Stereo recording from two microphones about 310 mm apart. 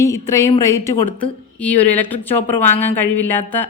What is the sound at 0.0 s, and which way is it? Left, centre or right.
A woman's voice, centre.